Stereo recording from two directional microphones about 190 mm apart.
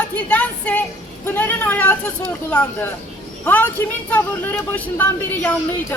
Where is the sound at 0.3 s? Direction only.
5° left (ahead or behind).